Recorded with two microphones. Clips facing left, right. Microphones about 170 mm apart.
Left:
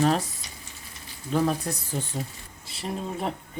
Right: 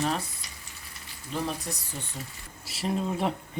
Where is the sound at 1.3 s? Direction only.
45° left (ahead or behind).